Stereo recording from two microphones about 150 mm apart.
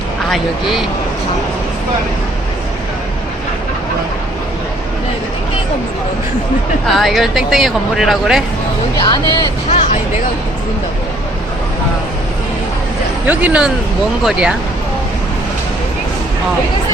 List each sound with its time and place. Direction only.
0.3 s speech: centre (ahead or behind)
6.8 s speech: centre (ahead or behind)
9.0 s speech: 30° left (ahead or behind)
13.2 s speech: 10° right (ahead or behind)